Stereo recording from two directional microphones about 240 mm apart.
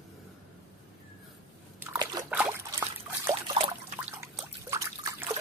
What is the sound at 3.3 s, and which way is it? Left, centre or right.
Trickle, right.